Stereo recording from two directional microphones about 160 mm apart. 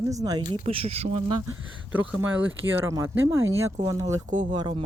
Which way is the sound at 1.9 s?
10° right (ahead or behind).